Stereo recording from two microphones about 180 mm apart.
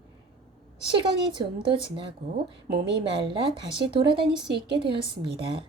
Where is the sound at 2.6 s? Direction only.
65° right (ahead or behind).